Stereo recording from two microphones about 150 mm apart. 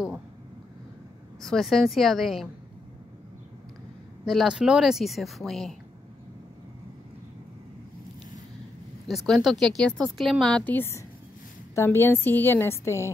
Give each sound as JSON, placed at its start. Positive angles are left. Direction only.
{"t": 1.4, "sound": "speech", "side_deg": 0}
{"t": 4.3, "sound": "speech", "side_deg": -5}
{"t": 9.0, "sound": "a woman's voice", "side_deg": 0}